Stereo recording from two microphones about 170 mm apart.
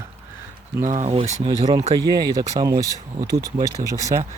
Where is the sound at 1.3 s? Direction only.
25° right (ahead or behind).